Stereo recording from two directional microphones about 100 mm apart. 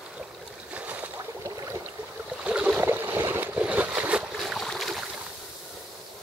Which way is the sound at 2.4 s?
10° right (ahead or behind).